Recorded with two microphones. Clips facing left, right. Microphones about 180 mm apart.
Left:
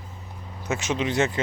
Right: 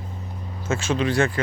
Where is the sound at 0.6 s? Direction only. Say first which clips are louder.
Right 3 dB; 20° left (ahead or behind).